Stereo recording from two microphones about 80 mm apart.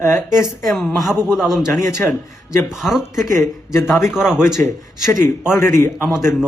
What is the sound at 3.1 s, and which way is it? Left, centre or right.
Speech, left.